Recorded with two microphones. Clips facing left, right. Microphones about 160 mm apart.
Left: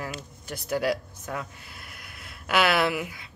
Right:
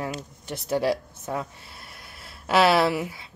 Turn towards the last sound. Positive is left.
turn(degrees=-30)  # may be behind; listen again after turning